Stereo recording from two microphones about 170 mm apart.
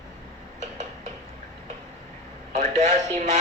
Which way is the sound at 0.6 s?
40° right (ahead or behind).